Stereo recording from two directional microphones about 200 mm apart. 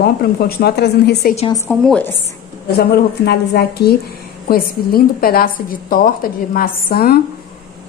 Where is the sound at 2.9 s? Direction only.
55° left (ahead or behind).